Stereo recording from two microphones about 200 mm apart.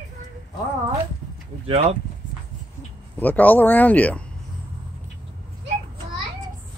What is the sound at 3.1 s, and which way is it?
Speech, 10° left (ahead or behind).